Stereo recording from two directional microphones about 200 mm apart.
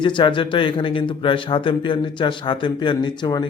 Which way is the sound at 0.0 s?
25° left (ahead or behind).